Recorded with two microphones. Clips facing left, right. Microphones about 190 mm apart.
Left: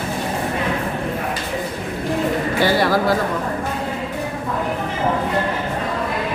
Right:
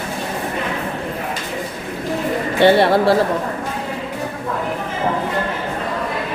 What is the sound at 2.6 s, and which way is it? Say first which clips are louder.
Speech: right 6 dB; 25° right (ahead or behind).